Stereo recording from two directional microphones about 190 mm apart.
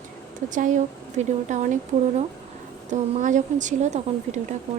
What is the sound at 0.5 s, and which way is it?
A woman's voice, 40° right (ahead or behind).